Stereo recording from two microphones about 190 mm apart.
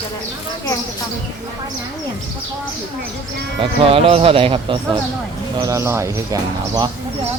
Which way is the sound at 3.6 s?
30° right (ahead or behind).